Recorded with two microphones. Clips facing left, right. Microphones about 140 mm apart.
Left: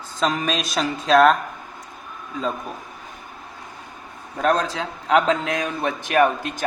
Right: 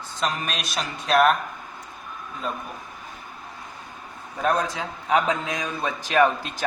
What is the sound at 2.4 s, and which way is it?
Speech, 90° left.